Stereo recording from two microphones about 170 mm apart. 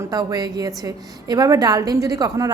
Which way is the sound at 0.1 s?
20° right (ahead or behind).